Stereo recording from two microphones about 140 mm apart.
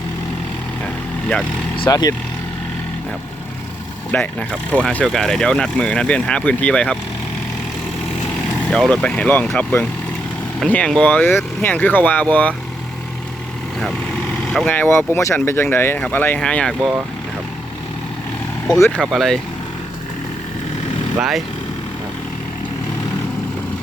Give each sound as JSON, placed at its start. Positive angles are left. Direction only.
{"t": 1.9, "sound": "speech", "side_deg": 25}
{"t": 4.1, "sound": "speech", "side_deg": 10}
{"t": 8.7, "sound": "speech", "side_deg": 5}
{"t": 13.7, "sound": "vehicle", "side_deg": 5}
{"t": 14.7, "sound": "speech", "side_deg": 15}
{"t": 18.9, "sound": "speech", "side_deg": 0}
{"t": 21.2, "sound": "speech", "side_deg": -5}